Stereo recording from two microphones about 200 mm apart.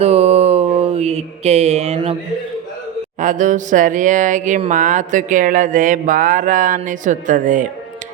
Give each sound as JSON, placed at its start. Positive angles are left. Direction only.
{"t": 0.0, "sound": "mantra", "side_deg": -30}
{"t": 3.2, "sound": "speech", "side_deg": -40}